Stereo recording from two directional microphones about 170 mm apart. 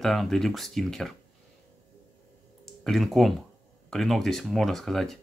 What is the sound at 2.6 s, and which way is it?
Speech, centre (ahead or behind).